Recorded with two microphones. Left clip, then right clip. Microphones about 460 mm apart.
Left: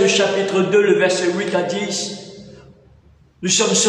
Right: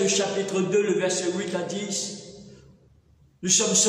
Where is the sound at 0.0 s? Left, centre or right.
Left.